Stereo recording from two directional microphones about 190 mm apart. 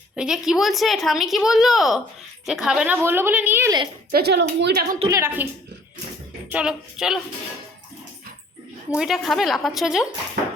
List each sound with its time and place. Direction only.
0.2 s a woman's voice: 5° right (ahead or behind)
4.1 s a woman's voice: 60° right (ahead or behind)
5.0 s a woman's voice: 15° right (ahead or behind)
6.5 s a woman's voice: 5° right (ahead or behind)
9.0 s a woman's voice: centre (ahead or behind)